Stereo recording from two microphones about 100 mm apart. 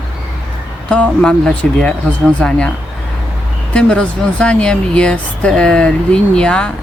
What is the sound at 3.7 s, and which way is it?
Speech, 10° left (ahead or behind).